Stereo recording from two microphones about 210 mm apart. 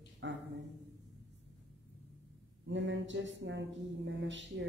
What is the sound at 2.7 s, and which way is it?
A woman's voice, 60° right (ahead or behind).